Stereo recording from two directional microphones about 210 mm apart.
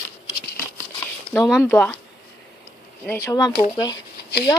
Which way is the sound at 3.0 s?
10° left (ahead or behind).